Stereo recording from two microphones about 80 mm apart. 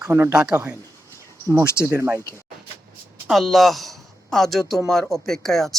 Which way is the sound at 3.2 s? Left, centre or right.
Centre.